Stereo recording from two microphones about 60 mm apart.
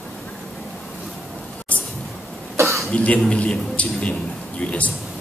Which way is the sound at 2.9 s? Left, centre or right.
Left.